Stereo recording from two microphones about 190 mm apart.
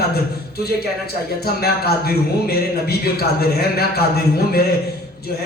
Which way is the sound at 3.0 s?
55° left (ahead or behind).